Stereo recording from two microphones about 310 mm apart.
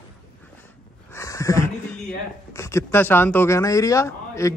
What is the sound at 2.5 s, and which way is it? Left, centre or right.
A man's voice, centre.